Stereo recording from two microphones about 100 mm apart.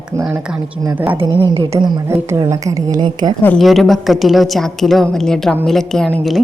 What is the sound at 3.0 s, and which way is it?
Speech, 45° right (ahead or behind).